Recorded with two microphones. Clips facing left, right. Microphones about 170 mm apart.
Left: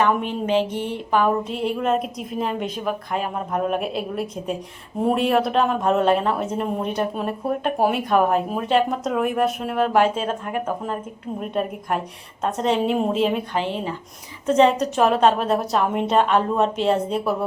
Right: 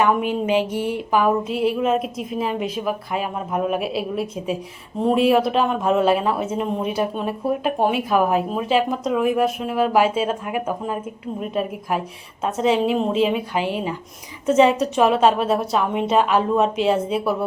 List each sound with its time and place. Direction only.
0.1 s speech: 10° right (ahead or behind)